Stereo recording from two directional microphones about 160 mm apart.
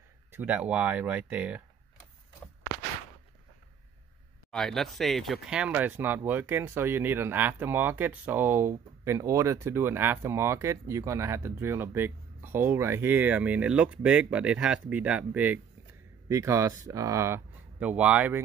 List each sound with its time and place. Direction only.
0.3 s speech: 10° right (ahead or behind)
4.5 s speech: 5° left (ahead or behind)
16.3 s speech: 20° right (ahead or behind)